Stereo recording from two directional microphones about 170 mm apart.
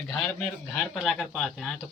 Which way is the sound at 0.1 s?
5° left (ahead or behind).